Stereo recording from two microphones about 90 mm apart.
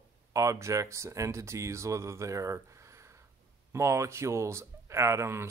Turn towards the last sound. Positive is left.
turn(degrees=-30)  # may be behind; listen again after turning